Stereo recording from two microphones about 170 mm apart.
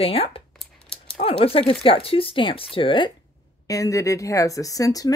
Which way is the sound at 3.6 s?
20° left (ahead or behind).